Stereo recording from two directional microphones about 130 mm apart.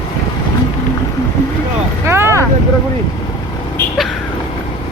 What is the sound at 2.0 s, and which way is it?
Vehicle, 20° right (ahead or behind).